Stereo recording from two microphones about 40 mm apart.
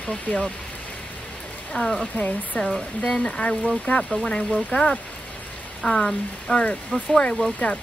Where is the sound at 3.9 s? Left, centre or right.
Left.